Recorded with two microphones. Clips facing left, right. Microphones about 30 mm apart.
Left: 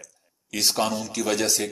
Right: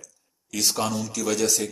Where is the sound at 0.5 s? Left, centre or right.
Left.